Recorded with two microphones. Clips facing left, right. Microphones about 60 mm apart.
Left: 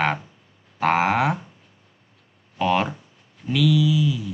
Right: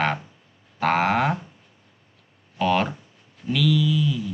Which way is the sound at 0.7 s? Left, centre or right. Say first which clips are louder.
Left 1 dB; centre.